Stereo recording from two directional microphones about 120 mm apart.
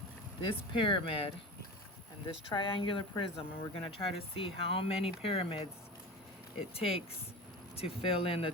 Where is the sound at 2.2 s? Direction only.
45° left (ahead or behind).